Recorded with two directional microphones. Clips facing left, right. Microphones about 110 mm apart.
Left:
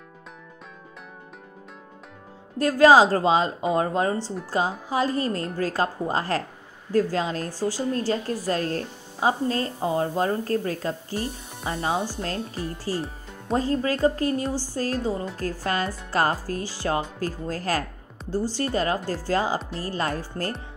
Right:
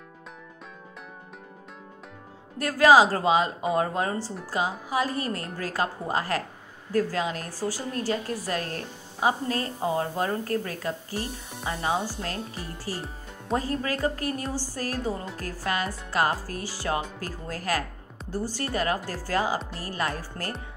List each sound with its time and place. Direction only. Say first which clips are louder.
2.6 s a woman's voice: left 2 dB; 30° left (ahead or behind)